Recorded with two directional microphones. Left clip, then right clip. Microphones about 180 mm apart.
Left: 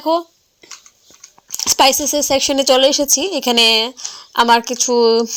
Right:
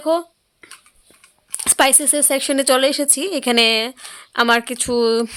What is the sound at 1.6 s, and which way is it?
Speech, 5° right (ahead or behind).